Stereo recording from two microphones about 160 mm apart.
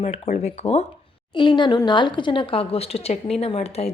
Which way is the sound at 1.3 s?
30° left (ahead or behind).